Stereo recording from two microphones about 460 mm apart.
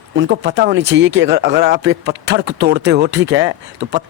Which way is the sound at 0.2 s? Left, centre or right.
Right.